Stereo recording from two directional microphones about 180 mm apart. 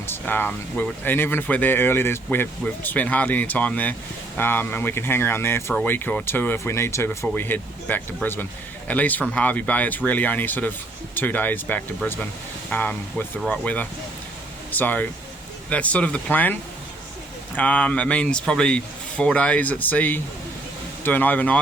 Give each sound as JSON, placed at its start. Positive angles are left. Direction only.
{"t": 0.1, "sound": "speech", "side_deg": 10}
{"t": 17.6, "sound": "speech", "side_deg": 5}